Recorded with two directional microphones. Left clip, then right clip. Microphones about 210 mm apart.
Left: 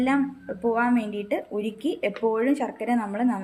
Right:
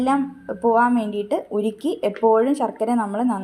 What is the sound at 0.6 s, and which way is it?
A woman's voice, 15° right (ahead or behind).